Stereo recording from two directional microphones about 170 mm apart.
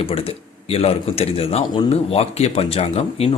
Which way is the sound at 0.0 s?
35° left (ahead or behind).